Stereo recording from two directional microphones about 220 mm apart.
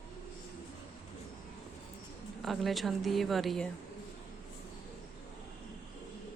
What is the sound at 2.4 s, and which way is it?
A woman's voice, centre (ahead or behind).